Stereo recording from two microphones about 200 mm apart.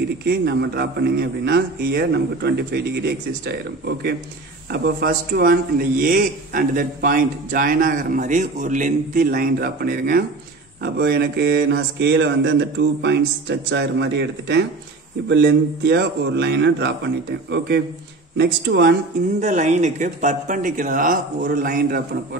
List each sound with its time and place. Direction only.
0.3 s a man's voice: 55° right (ahead or behind)
19.4 s a man's voice: 35° right (ahead or behind)